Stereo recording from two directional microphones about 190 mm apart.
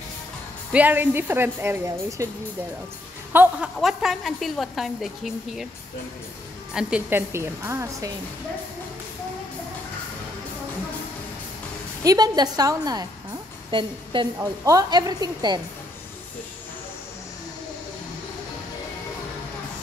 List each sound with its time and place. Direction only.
0.7 s a woman's voice: 10° right (ahead or behind)
3.3 s a woman's voice: 5° right (ahead or behind)
6.7 s a woman's voice: 5° right (ahead or behind)
12.0 s a woman's voice: 20° right (ahead or behind)